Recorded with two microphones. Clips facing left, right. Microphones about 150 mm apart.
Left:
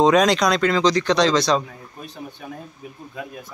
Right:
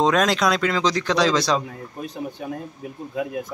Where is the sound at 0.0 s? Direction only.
Centre (ahead or behind).